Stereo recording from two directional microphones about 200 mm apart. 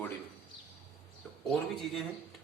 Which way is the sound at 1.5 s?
Centre (ahead or behind).